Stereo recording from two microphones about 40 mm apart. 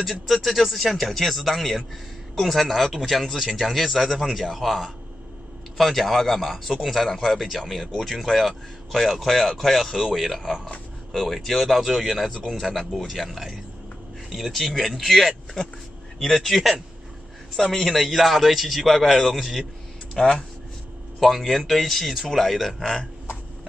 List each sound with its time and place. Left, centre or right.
0.0 s speech: centre
20.2 s speech: centre
21.2 s speech: centre